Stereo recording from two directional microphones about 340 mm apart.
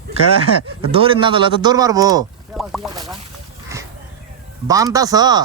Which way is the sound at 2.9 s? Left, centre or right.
Centre.